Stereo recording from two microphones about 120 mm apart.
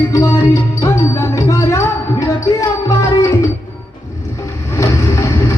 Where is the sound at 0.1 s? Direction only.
25° left (ahead or behind).